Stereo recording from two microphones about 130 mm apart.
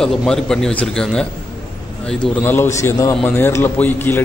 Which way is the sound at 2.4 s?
15° left (ahead or behind).